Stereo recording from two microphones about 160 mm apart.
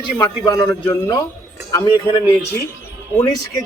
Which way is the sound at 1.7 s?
30° left (ahead or behind).